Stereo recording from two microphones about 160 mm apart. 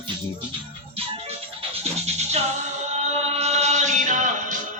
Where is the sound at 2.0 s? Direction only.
40° right (ahead or behind).